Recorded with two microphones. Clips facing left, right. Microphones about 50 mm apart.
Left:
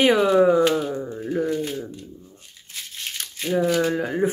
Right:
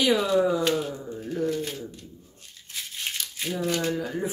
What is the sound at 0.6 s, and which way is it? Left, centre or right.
Speech, centre.